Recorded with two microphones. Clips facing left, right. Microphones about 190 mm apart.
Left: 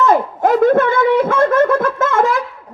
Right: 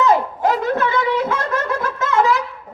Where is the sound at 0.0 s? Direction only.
50° left (ahead or behind).